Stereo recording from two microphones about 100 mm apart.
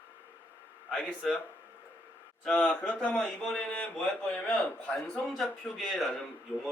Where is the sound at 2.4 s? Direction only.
10° left (ahead or behind).